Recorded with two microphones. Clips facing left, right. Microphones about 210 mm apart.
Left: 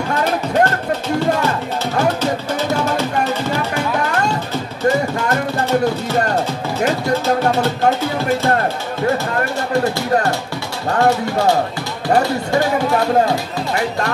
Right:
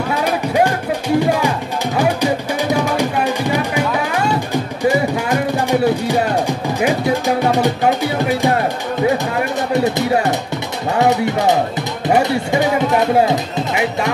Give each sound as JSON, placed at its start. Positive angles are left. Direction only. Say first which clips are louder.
{"t": 0.1, "sound": "music", "louder": "even", "side_deg": -10}
{"t": 2.7, "sound": "music", "louder": "right 2 dB", "side_deg": -15}
{"t": 11.0, "sound": "speech", "louder": "right 1 dB", "side_deg": -20}